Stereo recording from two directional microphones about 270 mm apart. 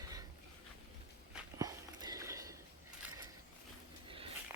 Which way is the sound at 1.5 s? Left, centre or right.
Centre.